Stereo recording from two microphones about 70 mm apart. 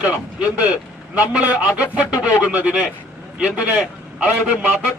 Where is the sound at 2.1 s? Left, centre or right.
Left.